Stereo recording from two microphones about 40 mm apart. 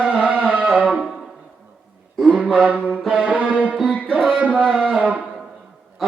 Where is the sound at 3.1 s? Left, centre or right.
Right.